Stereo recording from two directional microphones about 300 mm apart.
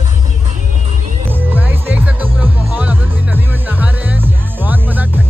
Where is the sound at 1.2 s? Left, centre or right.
Centre.